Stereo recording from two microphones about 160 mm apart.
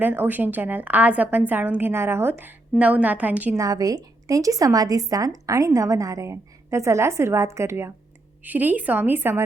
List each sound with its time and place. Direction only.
0.0 s a woman's voice: 10° right (ahead or behind)